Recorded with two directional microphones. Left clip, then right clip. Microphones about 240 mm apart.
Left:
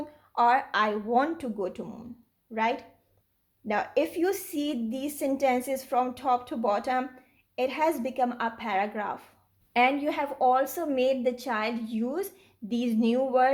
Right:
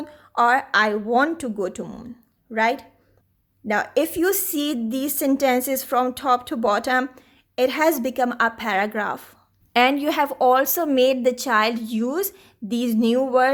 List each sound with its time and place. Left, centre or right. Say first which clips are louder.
0.0 s a woman's voice: right 5 dB; right